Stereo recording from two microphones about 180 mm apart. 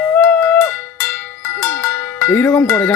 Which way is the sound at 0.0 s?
5° left (ahead or behind).